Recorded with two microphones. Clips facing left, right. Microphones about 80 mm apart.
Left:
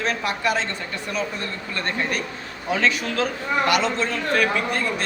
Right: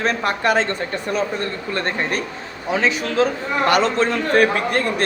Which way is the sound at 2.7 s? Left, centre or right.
Right.